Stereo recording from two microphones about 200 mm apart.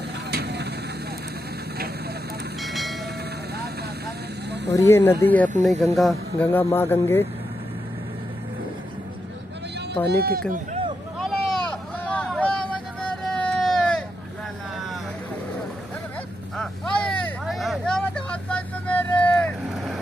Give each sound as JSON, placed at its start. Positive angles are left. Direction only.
{"t": 0.3, "sound": "vehicle", "side_deg": -55}
{"t": 2.6, "sound": "train", "side_deg": 0}
{"t": 4.5, "sound": "snake", "side_deg": -60}
{"t": 4.7, "sound": "speech", "side_deg": 10}
{"t": 10.0, "sound": "speech", "side_deg": -50}
{"t": 10.5, "sound": "a sound", "side_deg": -35}
{"t": 11.1, "sound": "vehicle", "side_deg": 0}
{"t": 13.0, "sound": "a sound", "side_deg": 5}
{"t": 16.5, "sound": "vehicle", "side_deg": 5}